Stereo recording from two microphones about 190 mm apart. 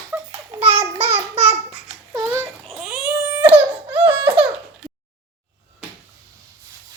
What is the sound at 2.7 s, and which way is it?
Baby cry, 5° right (ahead or behind).